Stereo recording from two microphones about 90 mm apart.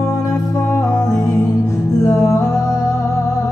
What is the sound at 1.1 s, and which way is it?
Music, 30° left (ahead or behind).